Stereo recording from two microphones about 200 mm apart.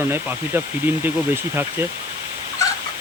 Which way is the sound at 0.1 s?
10° right (ahead or behind).